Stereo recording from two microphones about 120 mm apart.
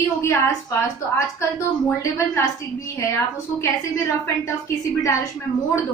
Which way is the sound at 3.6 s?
25° left (ahead or behind).